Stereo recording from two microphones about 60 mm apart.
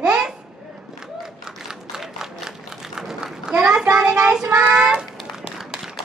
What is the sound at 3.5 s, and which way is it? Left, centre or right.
A child's voice, centre.